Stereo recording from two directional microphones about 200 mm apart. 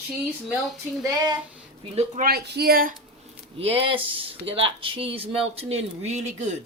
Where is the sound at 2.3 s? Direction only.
50° right (ahead or behind).